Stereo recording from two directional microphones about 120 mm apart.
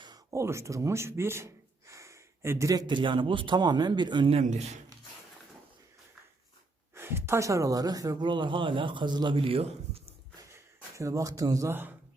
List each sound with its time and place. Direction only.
0.0 s speech: 30° right (ahead or behind)
4.3 s a man's voice: 65° right (ahead or behind)
6.9 s speech: 20° right (ahead or behind); by 10.2 s 50° right (ahead or behind)
10.9 s speech: 25° right (ahead or behind)